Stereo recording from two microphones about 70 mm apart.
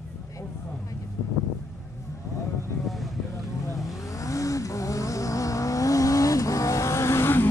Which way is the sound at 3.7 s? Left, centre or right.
Left.